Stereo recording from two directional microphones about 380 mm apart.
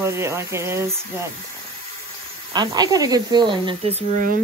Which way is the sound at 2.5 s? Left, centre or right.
Centre.